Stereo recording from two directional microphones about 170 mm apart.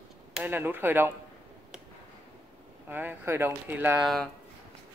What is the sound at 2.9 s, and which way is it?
Speech, 10° right (ahead or behind).